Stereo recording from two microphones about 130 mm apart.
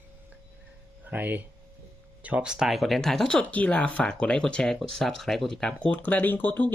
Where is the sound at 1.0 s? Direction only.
15° right (ahead or behind).